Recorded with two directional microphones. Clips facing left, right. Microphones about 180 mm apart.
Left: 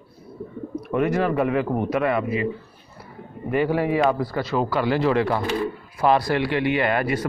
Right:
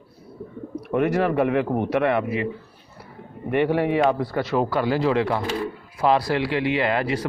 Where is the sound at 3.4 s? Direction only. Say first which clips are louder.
Right 1 dB; 60° right (ahead or behind).